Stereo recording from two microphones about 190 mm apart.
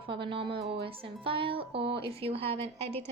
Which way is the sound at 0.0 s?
25° right (ahead or behind).